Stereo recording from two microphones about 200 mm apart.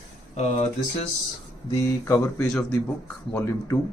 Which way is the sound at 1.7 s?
15° left (ahead or behind).